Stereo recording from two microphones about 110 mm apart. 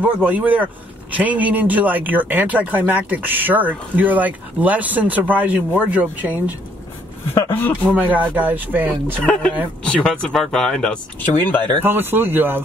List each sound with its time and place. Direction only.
0.2 s speech: 15° right (ahead or behind)
7.3 s speech: 20° left (ahead or behind)
7.9 s speech: 15° right (ahead or behind)
9.2 s speech: 10° left (ahead or behind)
11.8 s speech: 20° right (ahead or behind)